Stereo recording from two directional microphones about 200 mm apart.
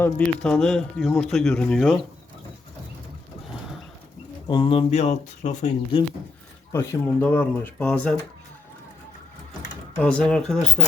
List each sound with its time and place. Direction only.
0.0 s a man's voice: 5° left (ahead or behind)
4.4 s speech: 25° left (ahead or behind)
6.7 s speech: 10° left (ahead or behind)
10.0 s a man's voice: 5° left (ahead or behind)